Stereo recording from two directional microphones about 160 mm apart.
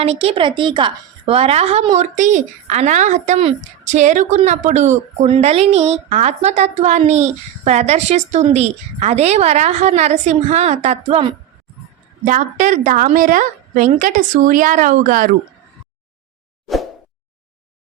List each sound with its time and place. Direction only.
0.0 s a woman's voice: 40° right (ahead or behind)
12.2 s a woman's voice: 55° right (ahead or behind)